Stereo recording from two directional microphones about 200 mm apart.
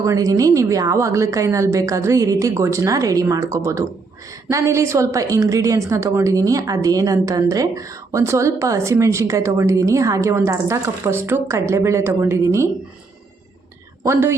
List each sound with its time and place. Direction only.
0.0 s a woman's voice: 15° right (ahead or behind)
14.0 s a woman's voice: 15° right (ahead or behind)